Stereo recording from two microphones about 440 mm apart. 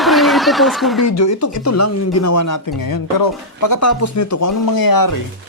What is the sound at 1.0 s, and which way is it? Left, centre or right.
Speech, left.